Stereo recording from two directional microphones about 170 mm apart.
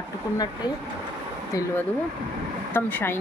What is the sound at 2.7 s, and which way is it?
Speech, 10° left (ahead or behind).